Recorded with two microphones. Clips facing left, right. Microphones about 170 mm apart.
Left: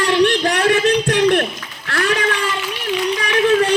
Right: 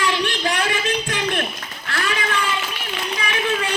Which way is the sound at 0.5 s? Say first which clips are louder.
Left 8 dB; 70° left (ahead or behind).